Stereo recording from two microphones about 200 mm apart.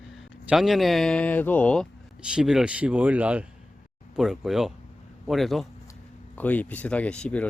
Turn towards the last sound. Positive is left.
turn(degrees=5)  # may be behind; listen again after turning